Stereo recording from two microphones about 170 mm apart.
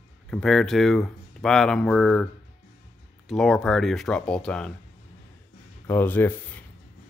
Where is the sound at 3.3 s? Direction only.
Centre (ahead or behind).